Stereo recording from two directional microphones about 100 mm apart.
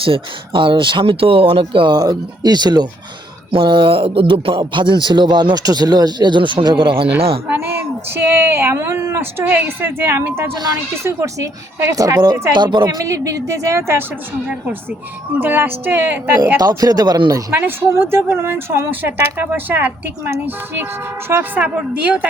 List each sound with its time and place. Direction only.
0.0 s speech: 60° right (ahead or behind); by 2.8 s 45° right (ahead or behind)
3.5 s speech: 55° right (ahead or behind)
7.5 s speech: 20° right (ahead or behind); by 13.0 s 50° right (ahead or behind)
13.1 s speech: 35° right (ahead or behind)
15.4 s speech: 20° right (ahead or behind)
16.6 s speech: 40° right (ahead or behind)
17.5 s speech: 20° right (ahead or behind)